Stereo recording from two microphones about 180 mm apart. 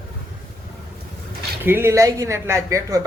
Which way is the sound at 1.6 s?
10° right (ahead or behind).